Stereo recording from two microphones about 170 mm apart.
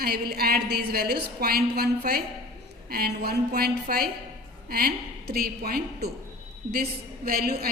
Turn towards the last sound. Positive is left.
turn(degrees=-60)  # may be behind; listen again after turning